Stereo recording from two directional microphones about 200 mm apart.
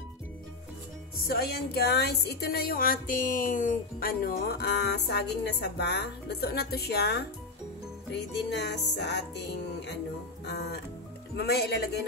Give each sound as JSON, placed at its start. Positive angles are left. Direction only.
{"t": 1.2, "sound": "speech", "side_deg": 50}
{"t": 8.5, "sound": "music", "side_deg": 60}
{"t": 10.5, "sound": "speech", "side_deg": 55}